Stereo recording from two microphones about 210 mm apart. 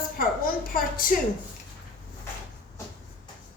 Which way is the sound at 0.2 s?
40° left (ahead or behind).